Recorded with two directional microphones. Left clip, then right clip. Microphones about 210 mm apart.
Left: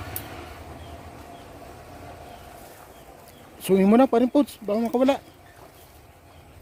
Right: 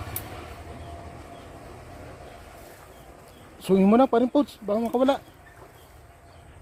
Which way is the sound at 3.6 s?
20° left (ahead or behind).